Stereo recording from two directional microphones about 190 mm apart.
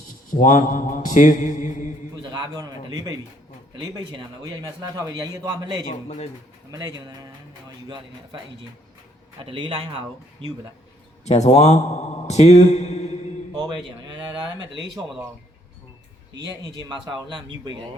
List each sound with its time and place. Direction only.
0.3 s mantra: 45° left (ahead or behind)
2.3 s a man's voice: 20° right (ahead or behind)
6.7 s a man's voice: 20° right (ahead or behind)
9.4 s a man's voice: 25° right (ahead or behind)
11.3 s a man's voice: 35° left (ahead or behind)
13.5 s a sound: 20° right (ahead or behind)
16.7 s a man's voice: 25° right (ahead or behind)